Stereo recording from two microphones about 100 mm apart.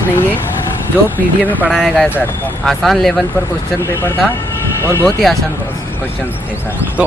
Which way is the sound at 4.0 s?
20° left (ahead or behind).